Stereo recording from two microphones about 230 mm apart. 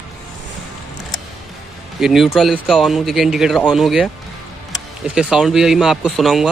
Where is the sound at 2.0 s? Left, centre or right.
Centre.